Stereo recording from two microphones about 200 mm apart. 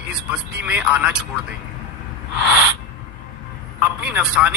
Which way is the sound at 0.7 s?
5° right (ahead or behind).